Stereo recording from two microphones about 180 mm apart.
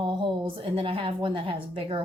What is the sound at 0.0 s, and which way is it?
A woman's voice, 25° right (ahead or behind).